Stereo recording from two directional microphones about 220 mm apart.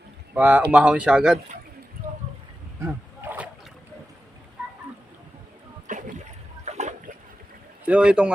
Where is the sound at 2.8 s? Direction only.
10° right (ahead or behind).